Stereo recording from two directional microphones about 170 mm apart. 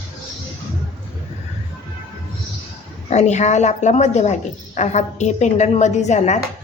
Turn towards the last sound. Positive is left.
turn(degrees=40)  # may be behind; listen again after turning